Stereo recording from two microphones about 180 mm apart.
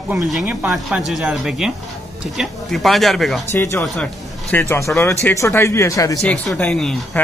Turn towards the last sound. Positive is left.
turn(degrees=5)  # may be behind; listen again after turning